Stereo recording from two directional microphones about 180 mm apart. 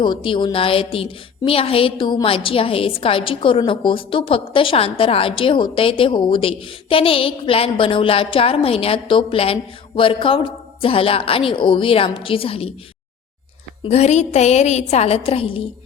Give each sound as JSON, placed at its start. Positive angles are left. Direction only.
{"t": 0.0, "sound": "a woman's voice", "side_deg": 25}
{"t": 13.8, "sound": "a woman's voice", "side_deg": 40}